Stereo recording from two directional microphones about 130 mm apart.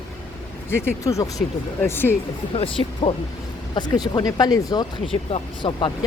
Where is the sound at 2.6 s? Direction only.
45° left (ahead or behind).